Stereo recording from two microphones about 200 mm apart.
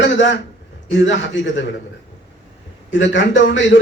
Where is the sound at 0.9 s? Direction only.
65° left (ahead or behind).